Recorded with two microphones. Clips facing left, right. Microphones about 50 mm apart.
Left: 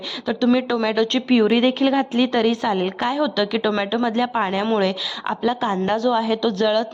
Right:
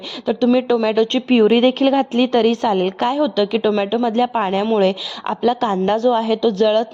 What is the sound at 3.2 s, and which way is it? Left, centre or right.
Speech, right.